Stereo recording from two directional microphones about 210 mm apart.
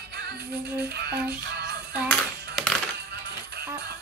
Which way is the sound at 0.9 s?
50° right (ahead or behind).